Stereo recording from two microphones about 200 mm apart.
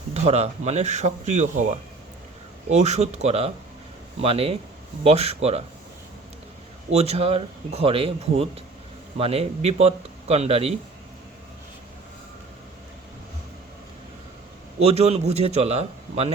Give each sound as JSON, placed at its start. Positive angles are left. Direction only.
{"t": 0.1, "sound": "speech", "side_deg": -30}
{"t": 2.6, "sound": "speech", "side_deg": -35}
{"t": 6.9, "sound": "speech", "side_deg": -30}
{"t": 14.8, "sound": "speech", "side_deg": -30}